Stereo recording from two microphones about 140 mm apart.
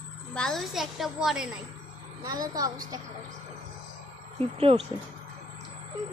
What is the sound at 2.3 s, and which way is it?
Speech, 25° right (ahead or behind).